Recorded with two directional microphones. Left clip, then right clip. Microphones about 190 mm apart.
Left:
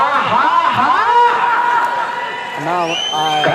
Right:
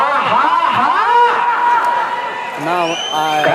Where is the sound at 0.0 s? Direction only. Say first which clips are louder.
Even; 25° right (ahead or behind).